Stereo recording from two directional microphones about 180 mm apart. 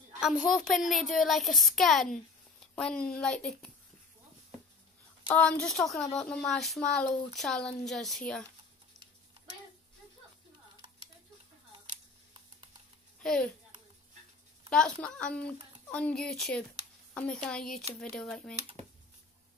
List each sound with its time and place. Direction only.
0.2 s a woman's voice: 5° right (ahead or behind)
5.3 s a woman's voice: 5° left (ahead or behind)
13.2 s a woman's voice: 5° left (ahead or behind)
14.7 s a woman's voice: 5° left (ahead or behind)